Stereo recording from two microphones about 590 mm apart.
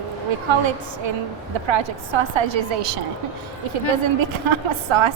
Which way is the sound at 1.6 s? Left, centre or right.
Right.